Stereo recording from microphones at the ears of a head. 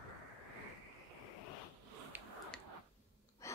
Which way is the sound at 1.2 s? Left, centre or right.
Left.